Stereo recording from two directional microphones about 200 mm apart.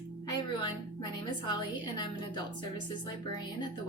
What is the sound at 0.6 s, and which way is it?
Music, 20° left (ahead or behind).